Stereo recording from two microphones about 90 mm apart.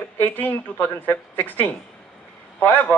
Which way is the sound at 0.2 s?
20° left (ahead or behind).